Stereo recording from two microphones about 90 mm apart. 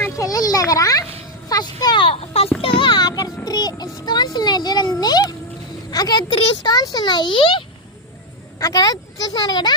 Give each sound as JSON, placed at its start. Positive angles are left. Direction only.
{"t": 0.2, "sound": "children playing", "side_deg": 45}
{"t": 1.5, "sound": "speech", "side_deg": 45}
{"t": 2.0, "sound": "a child's voice", "side_deg": 90}
{"t": 2.6, "sound": "child singing", "side_deg": 80}
{"t": 4.0, "sound": "a child's voice", "side_deg": 50}
{"t": 8.5, "sound": "a child's voice", "side_deg": 40}